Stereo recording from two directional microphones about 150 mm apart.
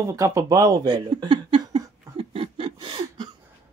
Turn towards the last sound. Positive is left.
turn(degrees=-35)  # may be behind; listen again after turning